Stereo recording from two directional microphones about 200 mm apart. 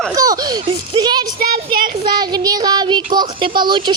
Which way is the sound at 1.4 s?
50° right (ahead or behind).